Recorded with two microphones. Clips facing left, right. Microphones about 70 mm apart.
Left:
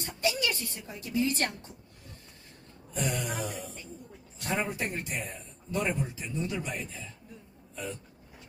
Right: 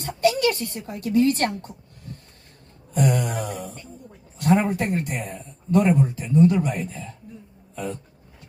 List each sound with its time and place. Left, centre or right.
0.0 s speech: right